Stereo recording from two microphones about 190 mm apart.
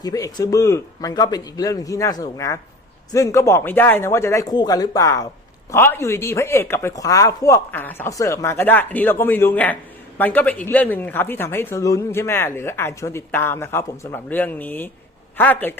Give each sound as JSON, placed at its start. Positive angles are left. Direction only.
{"t": 0.0, "sound": "speech", "side_deg": 20}